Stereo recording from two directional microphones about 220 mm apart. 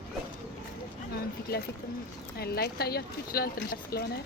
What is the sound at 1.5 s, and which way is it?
Speech, 45° left (ahead or behind).